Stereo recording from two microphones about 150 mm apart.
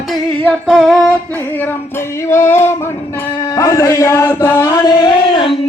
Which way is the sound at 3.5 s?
20° left (ahead or behind).